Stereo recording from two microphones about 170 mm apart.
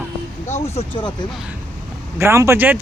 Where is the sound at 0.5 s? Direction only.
40° left (ahead or behind).